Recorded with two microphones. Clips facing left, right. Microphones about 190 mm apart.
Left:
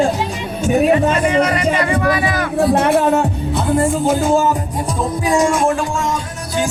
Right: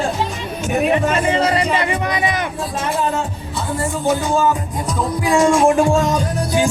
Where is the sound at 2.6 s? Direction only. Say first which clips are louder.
Left 11 dB; 65° left (ahead or behind).